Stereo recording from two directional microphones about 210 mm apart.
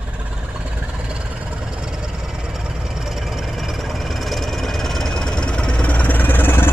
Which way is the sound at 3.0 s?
Centre (ahead or behind).